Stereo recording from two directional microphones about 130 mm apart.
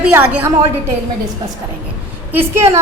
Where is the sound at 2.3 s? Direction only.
15° right (ahead or behind).